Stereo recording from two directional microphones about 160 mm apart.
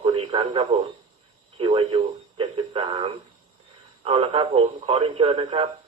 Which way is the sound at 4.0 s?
35° right (ahead or behind).